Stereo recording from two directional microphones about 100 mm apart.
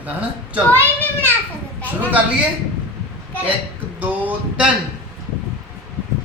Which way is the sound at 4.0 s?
15° right (ahead or behind).